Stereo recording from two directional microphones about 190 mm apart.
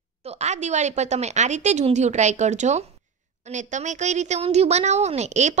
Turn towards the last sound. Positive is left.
turn(degrees=-35)  # may be behind; listen again after turning